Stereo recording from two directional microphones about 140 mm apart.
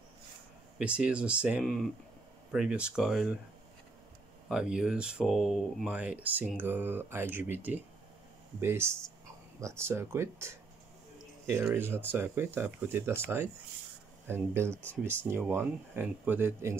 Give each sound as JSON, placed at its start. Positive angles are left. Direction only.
{"t": 0.7, "sound": "speech", "side_deg": -10}
{"t": 4.5, "sound": "speech", "side_deg": -5}
{"t": 5.9, "sound": "speech", "side_deg": -10}
{"t": 11.7, "sound": "speech", "side_deg": -15}
{"t": 14.8, "sound": "speech", "side_deg": 10}
{"t": 15.2, "sound": "speech", "side_deg": -15}